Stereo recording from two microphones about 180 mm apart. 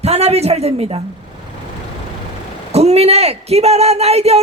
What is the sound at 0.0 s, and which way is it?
Speech, 35° right (ahead or behind).